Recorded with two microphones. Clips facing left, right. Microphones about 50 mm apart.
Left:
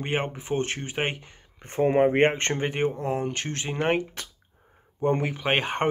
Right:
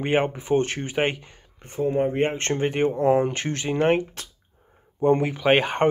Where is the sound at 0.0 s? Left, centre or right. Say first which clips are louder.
Right 6 dB; centre.